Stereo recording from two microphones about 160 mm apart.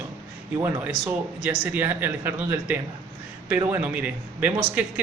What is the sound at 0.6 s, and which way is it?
Speech, 10° right (ahead or behind).